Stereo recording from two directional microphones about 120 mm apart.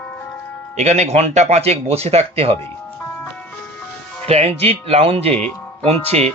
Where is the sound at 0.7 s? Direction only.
70° right (ahead or behind).